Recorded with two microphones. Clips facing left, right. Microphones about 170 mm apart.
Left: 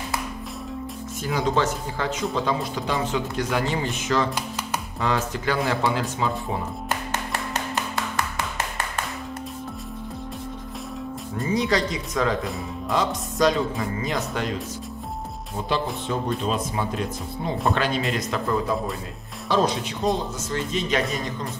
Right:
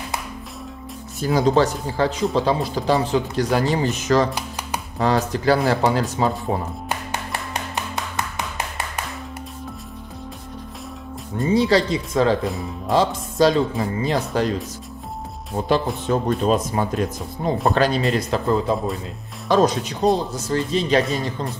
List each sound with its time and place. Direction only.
1.2 s speech: 35° right (ahead or behind)
7.7 s music: 20° right (ahead or behind)
11.4 s speech: 30° right (ahead or behind)
16.1 s speech: 45° right (ahead or behind)
19.5 s speech: 45° right (ahead or behind)